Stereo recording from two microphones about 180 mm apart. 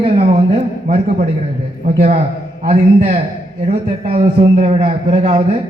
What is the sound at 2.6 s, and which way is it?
A man's voice, 35° right (ahead or behind).